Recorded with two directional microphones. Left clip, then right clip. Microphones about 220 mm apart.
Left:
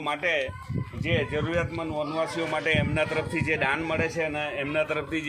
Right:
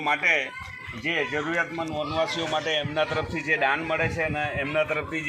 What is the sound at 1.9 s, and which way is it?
Speech, 15° left (ahead or behind).